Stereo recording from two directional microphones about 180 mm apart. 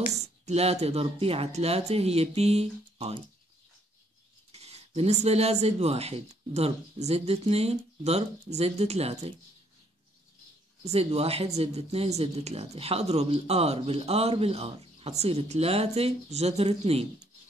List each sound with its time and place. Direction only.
0.1 s speech: 40° right (ahead or behind)
4.5 s speech: 35° right (ahead or behind)
10.8 s speech: 35° right (ahead or behind)